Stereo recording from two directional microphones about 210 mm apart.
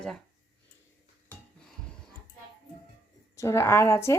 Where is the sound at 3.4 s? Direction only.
15° left (ahead or behind).